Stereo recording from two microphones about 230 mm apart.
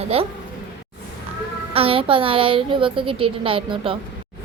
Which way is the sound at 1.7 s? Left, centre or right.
Right.